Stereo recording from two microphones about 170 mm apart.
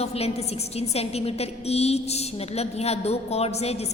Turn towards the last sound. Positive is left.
turn(degrees=40)  # may be behind; listen again after turning